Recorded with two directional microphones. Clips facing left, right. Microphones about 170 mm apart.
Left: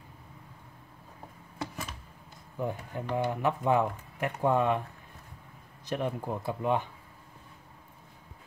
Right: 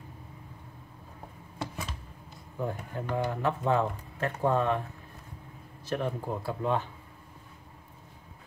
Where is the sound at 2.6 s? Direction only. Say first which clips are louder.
Even; 15° left (ahead or behind).